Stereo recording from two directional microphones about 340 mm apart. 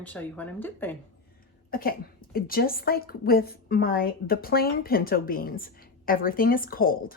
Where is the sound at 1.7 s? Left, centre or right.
Left.